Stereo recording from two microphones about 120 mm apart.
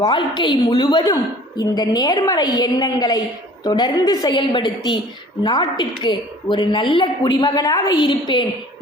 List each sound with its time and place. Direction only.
0.0 s a woman's voice: 40° left (ahead or behind)
4.4 s a woman's voice: 45° left (ahead or behind)